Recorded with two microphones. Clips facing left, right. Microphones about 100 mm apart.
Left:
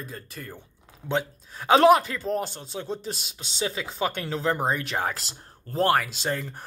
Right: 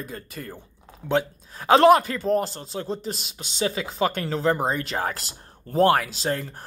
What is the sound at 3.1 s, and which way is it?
Speech, 45° right (ahead or behind).